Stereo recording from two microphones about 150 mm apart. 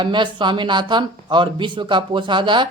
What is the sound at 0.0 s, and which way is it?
Speech, 30° right (ahead or behind).